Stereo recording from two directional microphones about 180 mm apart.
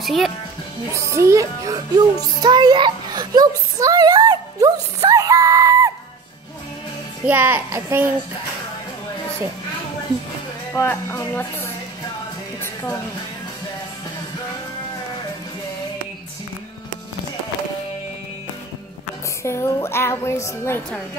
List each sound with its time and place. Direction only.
0.0 s speech: centre (ahead or behind)
0.9 s a child's voice: 15° right (ahead or behind)
7.2 s a child's voice: 10° right (ahead or behind)
10.7 s a woman's voice: 10° left (ahead or behind)
19.4 s a woman's voice: 15° left (ahead or behind)